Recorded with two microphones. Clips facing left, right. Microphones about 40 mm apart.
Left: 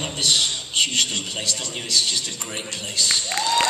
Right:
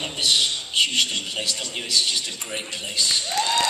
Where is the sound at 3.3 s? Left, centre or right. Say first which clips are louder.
Right 1 dB; left.